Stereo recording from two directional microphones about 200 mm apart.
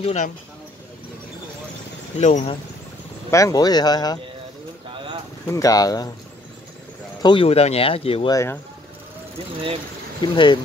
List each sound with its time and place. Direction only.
0.0 s speech: 35° left (ahead or behind)
2.1 s speech: 35° left (ahead or behind)
3.3 s speech: 15° left (ahead or behind)
4.9 s pigeon: 25° right (ahead or behind)
5.5 s speech: 15° left (ahead or behind)
7.2 s speech: 25° left (ahead or behind)
10.2 s speech: 25° left (ahead or behind)